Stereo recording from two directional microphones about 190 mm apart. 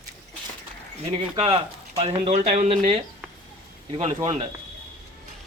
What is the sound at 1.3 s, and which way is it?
Speech, 30° right (ahead or behind).